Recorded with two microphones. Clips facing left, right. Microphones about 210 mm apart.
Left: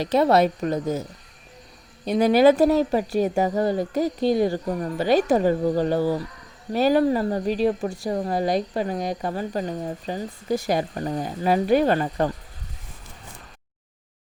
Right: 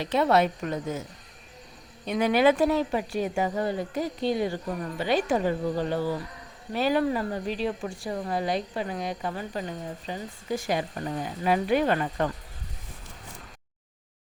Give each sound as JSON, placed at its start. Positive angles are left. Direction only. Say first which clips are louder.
{"t": 0.0, "sound": "speech", "louder": "left 4 dB", "side_deg": 40}
{"t": 2.0, "sound": "speech", "louder": "left 5 dB", "side_deg": 35}